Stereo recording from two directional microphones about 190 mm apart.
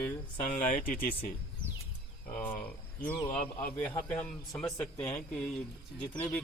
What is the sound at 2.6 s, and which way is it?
Speech, 10° left (ahead or behind).